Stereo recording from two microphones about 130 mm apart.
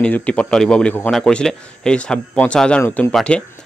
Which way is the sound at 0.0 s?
10° left (ahead or behind).